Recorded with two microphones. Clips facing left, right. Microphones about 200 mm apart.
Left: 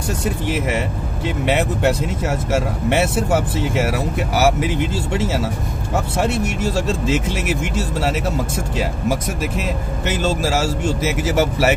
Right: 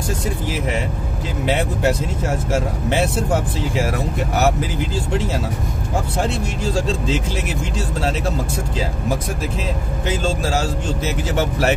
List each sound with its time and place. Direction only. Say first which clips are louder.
1.4 s speech: left 1 dB; 65° left (ahead or behind)
2.9 s speech: left 2 dB; 65° left (ahead or behind)
11.0 s speech: left 2 dB; 5° left (ahead or behind)